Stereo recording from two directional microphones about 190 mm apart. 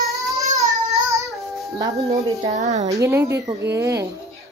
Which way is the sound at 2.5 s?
40° right (ahead or behind).